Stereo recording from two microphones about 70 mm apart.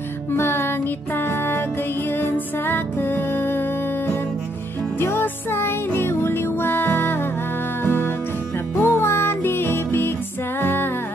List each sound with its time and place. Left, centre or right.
0.3 s music: left